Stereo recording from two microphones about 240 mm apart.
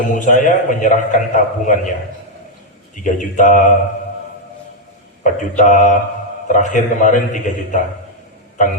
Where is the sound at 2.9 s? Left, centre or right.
Left.